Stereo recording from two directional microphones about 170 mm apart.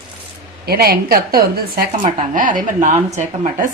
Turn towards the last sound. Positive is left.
turn(degrees=-45)  # may be behind; listen again after turning